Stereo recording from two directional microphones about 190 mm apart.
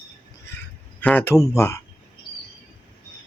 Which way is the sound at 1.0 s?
10° left (ahead or behind).